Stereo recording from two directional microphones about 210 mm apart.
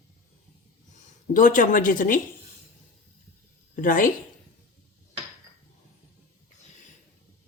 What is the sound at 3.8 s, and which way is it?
Speech, 40° left (ahead or behind).